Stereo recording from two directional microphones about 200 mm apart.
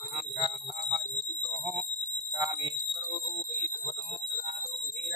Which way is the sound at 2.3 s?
15° right (ahead or behind).